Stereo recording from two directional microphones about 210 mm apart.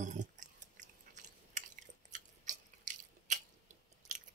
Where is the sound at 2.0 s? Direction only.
35° right (ahead or behind).